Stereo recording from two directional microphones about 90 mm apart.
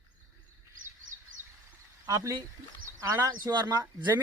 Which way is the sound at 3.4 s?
50° right (ahead or behind).